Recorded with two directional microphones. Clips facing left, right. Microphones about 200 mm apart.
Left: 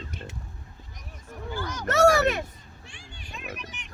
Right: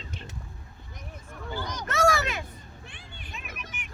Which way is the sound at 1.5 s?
15° right (ahead or behind).